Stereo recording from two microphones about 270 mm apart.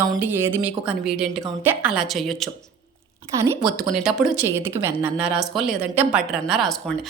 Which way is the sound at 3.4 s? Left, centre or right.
Centre.